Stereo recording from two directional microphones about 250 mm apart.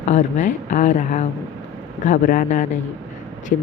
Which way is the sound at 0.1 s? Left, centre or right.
Left.